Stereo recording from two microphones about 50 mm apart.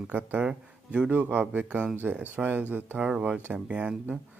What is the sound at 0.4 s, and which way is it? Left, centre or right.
Speech, right.